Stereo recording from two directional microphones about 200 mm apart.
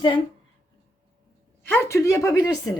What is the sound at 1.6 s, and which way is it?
Speech, 10° left (ahead or behind).